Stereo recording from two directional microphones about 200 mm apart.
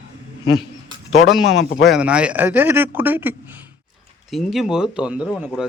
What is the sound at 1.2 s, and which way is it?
Speech, centre (ahead or behind).